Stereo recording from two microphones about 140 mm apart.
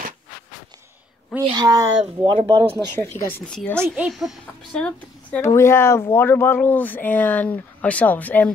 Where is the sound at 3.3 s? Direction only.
10° left (ahead or behind).